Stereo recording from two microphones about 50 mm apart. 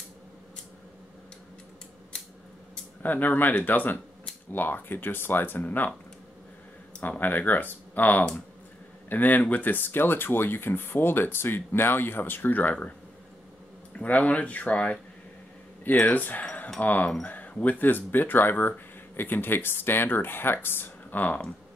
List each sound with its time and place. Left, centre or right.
3.0 s speech: left
7.0 s speech: left
14.0 s speech: left